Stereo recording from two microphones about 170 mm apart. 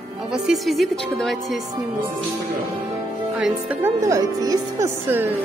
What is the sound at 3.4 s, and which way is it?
Speech, 5° right (ahead or behind).